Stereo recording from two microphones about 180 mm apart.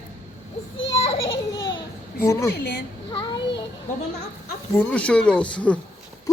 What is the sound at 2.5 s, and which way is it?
Speech, 65° left (ahead or behind).